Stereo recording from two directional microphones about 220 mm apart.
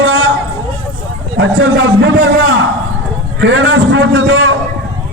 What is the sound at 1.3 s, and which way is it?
Speech, 60° right (ahead or behind).